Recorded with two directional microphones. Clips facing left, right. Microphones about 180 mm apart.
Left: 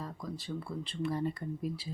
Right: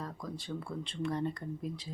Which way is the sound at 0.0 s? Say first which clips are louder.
Even; centre (ahead or behind).